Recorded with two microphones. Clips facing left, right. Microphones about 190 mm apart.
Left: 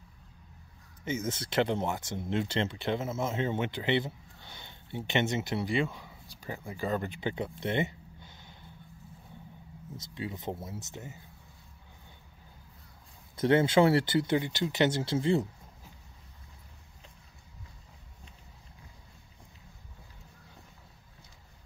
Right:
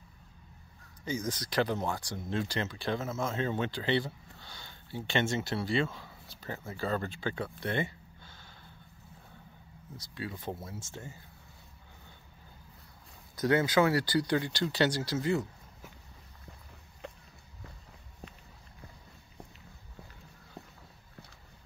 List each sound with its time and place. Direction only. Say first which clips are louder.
1.0 s speech: left 1 dB; 25° left (ahead or behind)
9.9 s speech: left 2 dB; 20° left (ahead or behind)
13.4 s speech: left 3 dB; 25° left (ahead or behind)
17.0 s a sound: right 14 dB; 60° right (ahead or behind)